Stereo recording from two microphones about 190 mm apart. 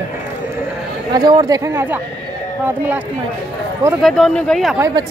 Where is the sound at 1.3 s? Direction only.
20° right (ahead or behind).